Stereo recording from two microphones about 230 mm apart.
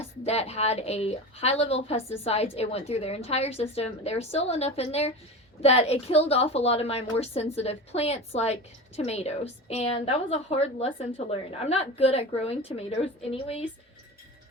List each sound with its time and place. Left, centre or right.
0.0 s a woman's voice: left